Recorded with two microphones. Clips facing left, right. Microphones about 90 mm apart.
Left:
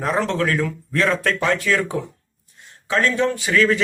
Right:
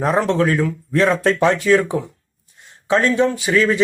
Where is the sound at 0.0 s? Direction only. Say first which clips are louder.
Right 4 dB; 20° right (ahead or behind).